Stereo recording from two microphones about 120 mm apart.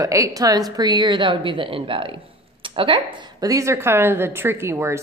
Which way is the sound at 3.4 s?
25° right (ahead or behind).